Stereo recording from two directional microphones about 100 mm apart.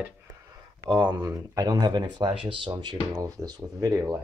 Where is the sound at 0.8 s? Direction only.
50° right (ahead or behind).